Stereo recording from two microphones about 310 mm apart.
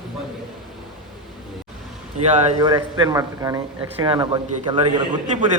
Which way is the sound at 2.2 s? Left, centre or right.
Right.